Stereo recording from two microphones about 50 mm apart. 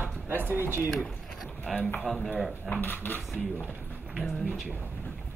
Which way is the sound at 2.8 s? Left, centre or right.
Left.